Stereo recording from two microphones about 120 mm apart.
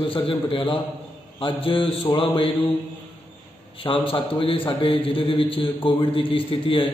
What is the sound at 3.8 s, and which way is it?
A man's voice, 50° left (ahead or behind).